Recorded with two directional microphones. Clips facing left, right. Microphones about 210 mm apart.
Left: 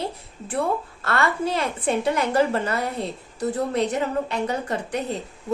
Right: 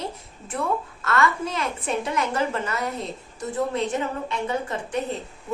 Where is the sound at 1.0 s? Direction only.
35° left (ahead or behind).